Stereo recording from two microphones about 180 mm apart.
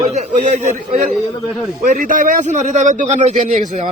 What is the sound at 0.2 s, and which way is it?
A man's voice, 45° right (ahead or behind).